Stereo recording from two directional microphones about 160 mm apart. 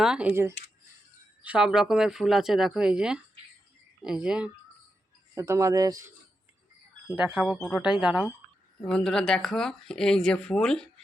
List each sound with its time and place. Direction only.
0.0 s speech: 5° right (ahead or behind)
5.3 s speech: 15° right (ahead or behind)
7.1 s speech: 10° right (ahead or behind)
8.8 s speech: 5° left (ahead or behind)